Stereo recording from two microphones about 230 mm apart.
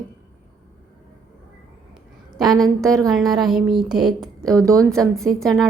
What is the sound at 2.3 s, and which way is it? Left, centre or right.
A woman's voice, centre.